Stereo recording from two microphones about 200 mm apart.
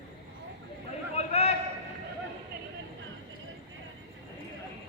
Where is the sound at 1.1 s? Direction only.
30° left (ahead or behind).